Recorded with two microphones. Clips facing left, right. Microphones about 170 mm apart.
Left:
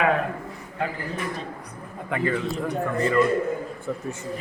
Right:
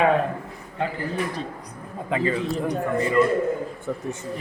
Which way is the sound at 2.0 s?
25° right (ahead or behind).